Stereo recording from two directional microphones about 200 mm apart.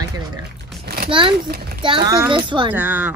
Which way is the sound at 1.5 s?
50° right (ahead or behind).